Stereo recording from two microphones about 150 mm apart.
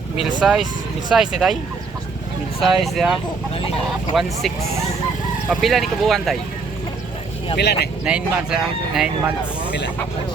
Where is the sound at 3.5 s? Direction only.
40° left (ahead or behind).